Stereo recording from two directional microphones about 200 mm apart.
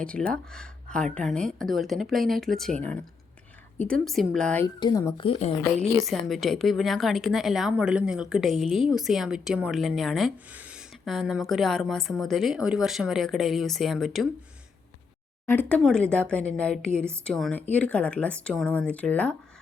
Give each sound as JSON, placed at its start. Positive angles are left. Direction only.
{"t": 0.0, "sound": "speech", "side_deg": 5}
{"t": 4.6, "sound": "speech", "side_deg": 20}
{"t": 6.1, "sound": "speech", "side_deg": 0}
{"t": 15.4, "sound": "speech", "side_deg": 10}